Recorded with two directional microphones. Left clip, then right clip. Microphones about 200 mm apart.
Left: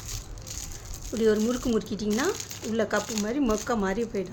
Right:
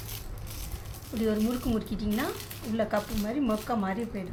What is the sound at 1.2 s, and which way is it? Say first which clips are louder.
Speech: left 6 dB; 55° left (ahead or behind).